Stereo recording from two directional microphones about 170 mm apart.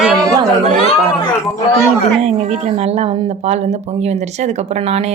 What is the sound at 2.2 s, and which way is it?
Speech, 40° right (ahead or behind).